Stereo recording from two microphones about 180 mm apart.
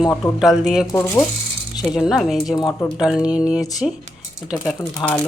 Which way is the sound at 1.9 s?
5° right (ahead or behind).